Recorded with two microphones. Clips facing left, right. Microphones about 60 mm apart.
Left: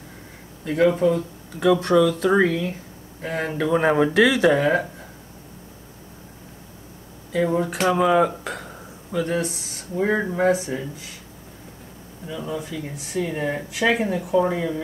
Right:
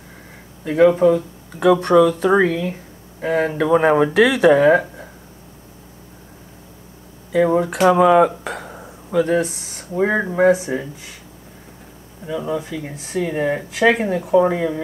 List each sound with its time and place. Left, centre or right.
0.7 s speech: centre
7.3 s speech: right
7.6 s speech: centre
10.0 s speech: centre
12.5 s speech: centre
13.3 s speech: centre
13.7 s speech: centre